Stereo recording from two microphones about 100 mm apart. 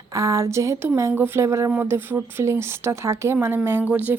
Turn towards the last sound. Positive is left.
turn(degrees=-15)  # may be behind; listen again after turning